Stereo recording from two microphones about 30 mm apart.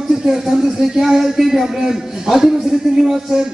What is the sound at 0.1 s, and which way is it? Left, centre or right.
A man's voice, centre.